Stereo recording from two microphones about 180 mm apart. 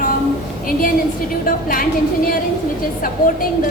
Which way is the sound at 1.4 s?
50° left (ahead or behind).